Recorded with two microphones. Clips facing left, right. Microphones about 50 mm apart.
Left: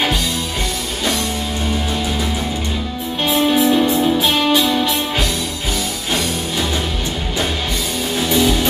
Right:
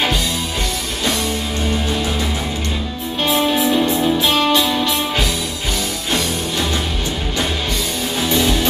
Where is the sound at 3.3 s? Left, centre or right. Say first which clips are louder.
Left 2 dB; centre.